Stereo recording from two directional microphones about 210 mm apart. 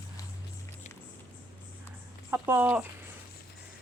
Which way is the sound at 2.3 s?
10° right (ahead or behind).